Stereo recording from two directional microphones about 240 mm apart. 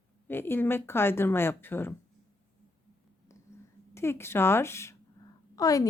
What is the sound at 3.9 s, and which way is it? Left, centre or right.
Speech, centre.